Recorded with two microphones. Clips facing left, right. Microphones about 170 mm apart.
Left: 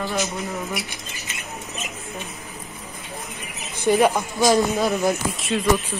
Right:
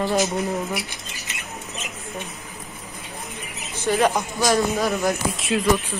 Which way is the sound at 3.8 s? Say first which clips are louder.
Left 2 dB; 15° left (ahead or behind).